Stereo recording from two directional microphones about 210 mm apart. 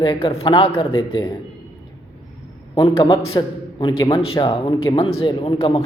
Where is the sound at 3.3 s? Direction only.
25° left (ahead or behind).